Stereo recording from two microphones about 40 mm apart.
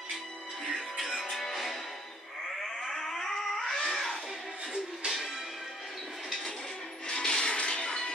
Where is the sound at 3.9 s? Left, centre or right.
Centre.